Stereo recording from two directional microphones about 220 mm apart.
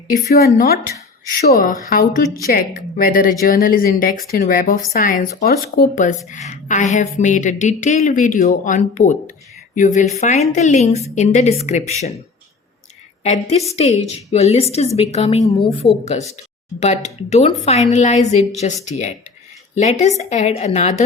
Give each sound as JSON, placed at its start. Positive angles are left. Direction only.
{"t": 0.3, "sound": "speech", "side_deg": 45}
{"t": 13.2, "sound": "a woman's voice", "side_deg": 30}